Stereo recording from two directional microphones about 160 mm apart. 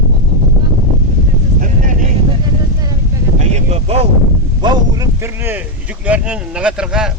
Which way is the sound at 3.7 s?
40° right (ahead or behind).